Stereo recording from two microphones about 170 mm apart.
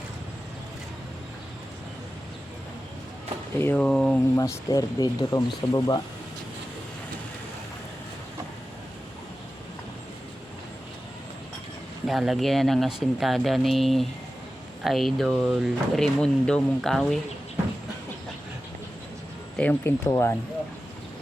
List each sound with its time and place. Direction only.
3.6 s speech: 10° left (ahead or behind)
4.4 s speech: 20° left (ahead or behind)
12.0 s speech: centre (ahead or behind)
19.5 s speech: 10° left (ahead or behind)